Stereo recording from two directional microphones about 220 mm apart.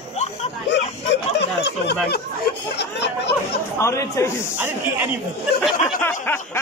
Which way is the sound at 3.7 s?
10° left (ahead or behind).